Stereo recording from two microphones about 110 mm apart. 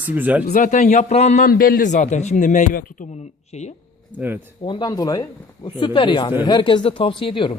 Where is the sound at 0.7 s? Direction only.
90° left.